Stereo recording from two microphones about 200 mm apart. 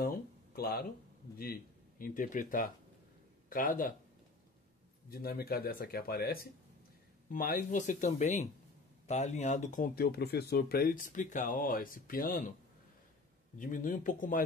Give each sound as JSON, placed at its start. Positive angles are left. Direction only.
{"t": 0.0, "sound": "a sound", "side_deg": 50}
{"t": 1.4, "sound": "speech", "side_deg": 45}
{"t": 5.1, "sound": "speech", "side_deg": 50}
{"t": 13.6, "sound": "speech", "side_deg": 40}